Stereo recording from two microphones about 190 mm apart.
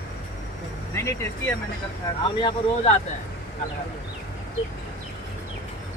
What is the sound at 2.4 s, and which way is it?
Speech, 30° left (ahead or behind).